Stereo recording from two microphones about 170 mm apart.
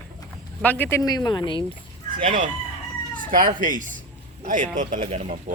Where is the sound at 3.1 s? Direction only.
55° right (ahead or behind).